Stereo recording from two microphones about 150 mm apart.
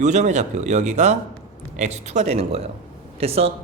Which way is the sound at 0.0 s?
50° right (ahead or behind).